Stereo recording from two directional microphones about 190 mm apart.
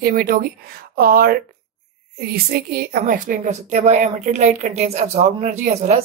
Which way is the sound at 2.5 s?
50° right (ahead or behind).